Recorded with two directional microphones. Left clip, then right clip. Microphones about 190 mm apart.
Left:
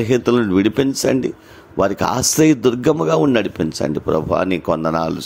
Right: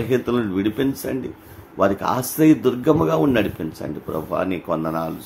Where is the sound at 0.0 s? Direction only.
45° left (ahead or behind).